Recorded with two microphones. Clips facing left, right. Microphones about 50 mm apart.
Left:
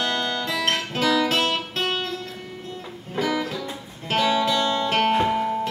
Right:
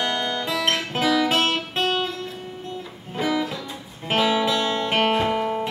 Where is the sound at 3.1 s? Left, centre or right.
Centre.